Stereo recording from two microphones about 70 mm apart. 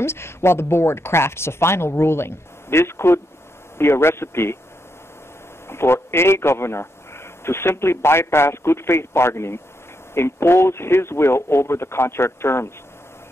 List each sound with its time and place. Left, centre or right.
0.0 s a man's voice: left
5.7 s a man's voice: left